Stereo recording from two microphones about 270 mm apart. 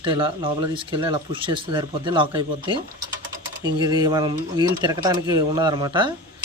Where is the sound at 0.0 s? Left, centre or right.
Centre.